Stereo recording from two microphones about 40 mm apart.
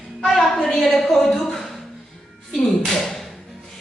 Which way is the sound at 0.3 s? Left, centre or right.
Centre.